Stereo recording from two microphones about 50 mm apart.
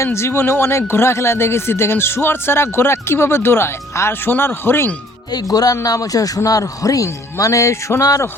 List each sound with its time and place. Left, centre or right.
0.0 s speech: left
6.4 s a man's voice: left